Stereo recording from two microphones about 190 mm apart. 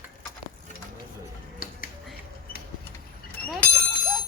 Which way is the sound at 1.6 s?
50° left (ahead or behind).